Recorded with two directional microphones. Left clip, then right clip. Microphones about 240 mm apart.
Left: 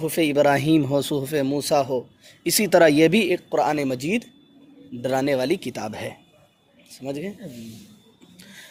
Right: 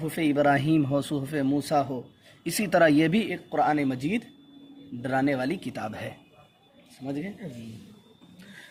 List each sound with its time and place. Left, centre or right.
0.1 s speech: left
7.0 s speech: left